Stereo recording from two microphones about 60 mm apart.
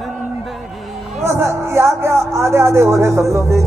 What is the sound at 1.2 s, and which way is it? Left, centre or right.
Speech, right.